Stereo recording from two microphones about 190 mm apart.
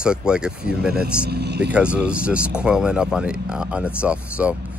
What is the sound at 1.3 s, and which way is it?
Speech, 60° right (ahead or behind).